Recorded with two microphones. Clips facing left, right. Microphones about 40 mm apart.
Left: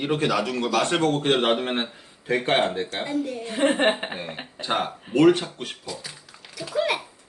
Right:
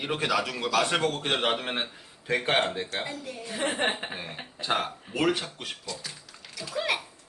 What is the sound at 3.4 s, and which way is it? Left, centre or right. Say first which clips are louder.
Speech: left 6 dB; left.